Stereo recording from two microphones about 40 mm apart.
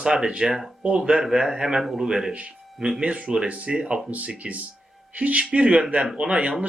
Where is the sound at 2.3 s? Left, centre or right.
Right.